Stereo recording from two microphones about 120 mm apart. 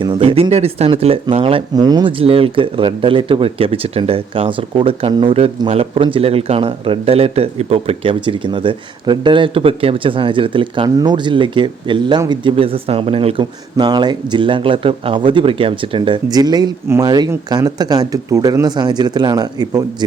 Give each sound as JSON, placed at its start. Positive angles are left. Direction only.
{"t": 0.0, "sound": "speech", "side_deg": -45}
{"t": 1.7, "sound": "speech", "side_deg": -35}
{"t": 10.8, "sound": "speech", "side_deg": -35}